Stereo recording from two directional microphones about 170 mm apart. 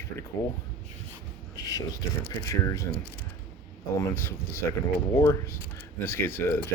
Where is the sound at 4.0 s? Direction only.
15° left (ahead or behind).